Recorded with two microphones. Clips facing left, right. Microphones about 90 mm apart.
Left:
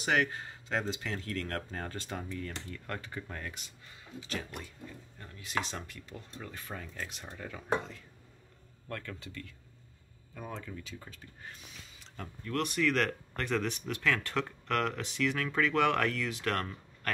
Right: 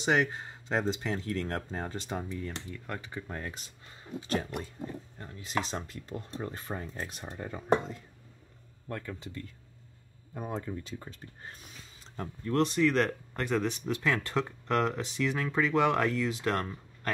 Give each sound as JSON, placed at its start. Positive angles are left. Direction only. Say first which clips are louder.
{"t": 0.0, "sound": "speech", "louder": "right 2 dB", "side_deg": -20}
{"t": 4.2, "sound": "speech", "louder": "right 7 dB", "side_deg": -35}
{"t": 10.4, "sound": "speech", "louder": "right 5 dB", "side_deg": -40}